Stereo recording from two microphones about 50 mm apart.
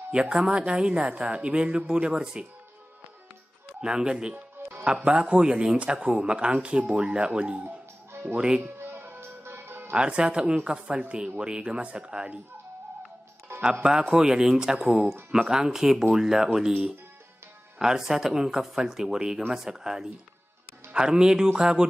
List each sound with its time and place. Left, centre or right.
0.1 s a woman's voice: centre
3.8 s speech: centre
8.6 s music: right
9.9 s speech: centre
13.5 s music: right
13.8 s speech: centre
17.7 s speech: centre